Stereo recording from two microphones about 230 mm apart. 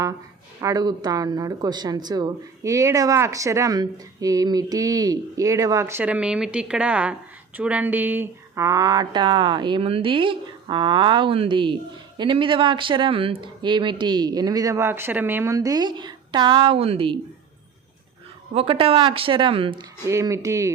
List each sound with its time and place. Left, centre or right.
0.6 s speech: centre
18.5 s speech: right